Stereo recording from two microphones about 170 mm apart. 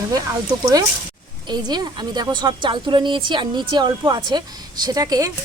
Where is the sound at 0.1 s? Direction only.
20° right (ahead or behind).